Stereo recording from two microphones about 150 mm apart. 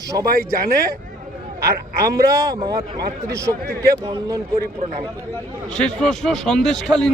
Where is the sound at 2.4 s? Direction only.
25° right (ahead or behind).